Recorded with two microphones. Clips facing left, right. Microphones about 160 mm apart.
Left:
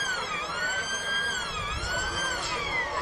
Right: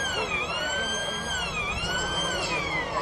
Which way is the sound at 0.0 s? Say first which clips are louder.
Right 4 dB; 15° right (ahead or behind).